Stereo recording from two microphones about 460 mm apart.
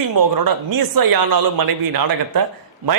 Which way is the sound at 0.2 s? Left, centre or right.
Right.